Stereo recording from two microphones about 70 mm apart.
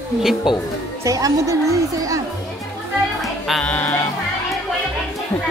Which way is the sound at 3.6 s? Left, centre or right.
Left.